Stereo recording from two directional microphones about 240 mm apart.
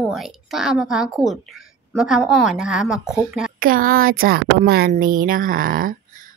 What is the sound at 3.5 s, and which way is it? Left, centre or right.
Speech, right.